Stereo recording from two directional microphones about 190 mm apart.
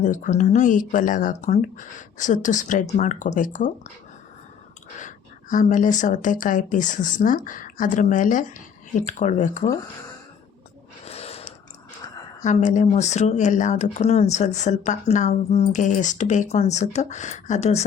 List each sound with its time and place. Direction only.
0.0 s speech: 40° left (ahead or behind)
4.9 s a woman's voice: 40° left (ahead or behind)
11.0 s snort: 30° left (ahead or behind)
12.4 s speech: 40° left (ahead or behind)